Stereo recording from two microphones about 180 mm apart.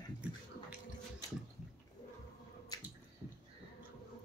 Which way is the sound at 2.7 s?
20° left (ahead or behind).